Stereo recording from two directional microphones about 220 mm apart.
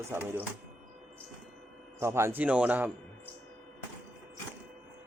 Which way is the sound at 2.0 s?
10° right (ahead or behind).